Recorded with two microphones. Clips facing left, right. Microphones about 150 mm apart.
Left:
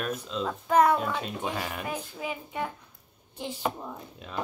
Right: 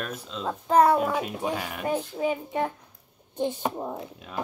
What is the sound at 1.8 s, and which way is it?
Speech, 40° right (ahead or behind).